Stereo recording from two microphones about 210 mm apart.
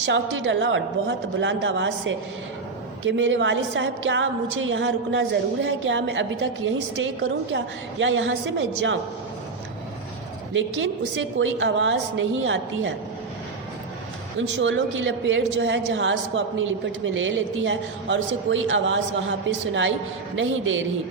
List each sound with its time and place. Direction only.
0.0 s a woman's voice: 60° right (ahead or behind)
10.5 s a woman's voice: 65° right (ahead or behind)
14.3 s a woman's voice: 65° right (ahead or behind)
20.3 s a woman's voice: 65° right (ahead or behind)